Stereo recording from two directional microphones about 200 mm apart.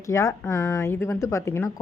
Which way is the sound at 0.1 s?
15° left (ahead or behind).